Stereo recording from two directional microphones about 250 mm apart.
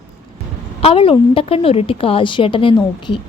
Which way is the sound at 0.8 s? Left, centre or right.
Left.